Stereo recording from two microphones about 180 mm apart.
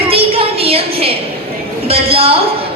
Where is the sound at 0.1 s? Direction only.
30° right (ahead or behind).